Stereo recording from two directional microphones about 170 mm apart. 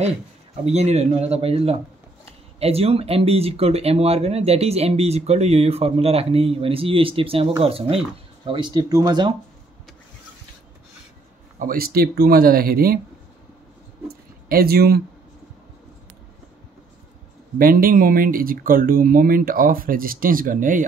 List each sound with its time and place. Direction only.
0.7 s speech: 40° right (ahead or behind); by 9.3 s 25° right (ahead or behind)
11.6 s speech: 60° right (ahead or behind)
14.0 s a sound: 65° right (ahead or behind)
17.6 s speech: 55° right (ahead or behind)